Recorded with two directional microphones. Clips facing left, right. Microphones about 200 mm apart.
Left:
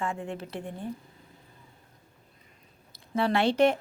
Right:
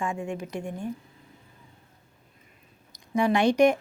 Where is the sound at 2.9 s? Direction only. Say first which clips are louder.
Right 3 dB; 15° right (ahead or behind).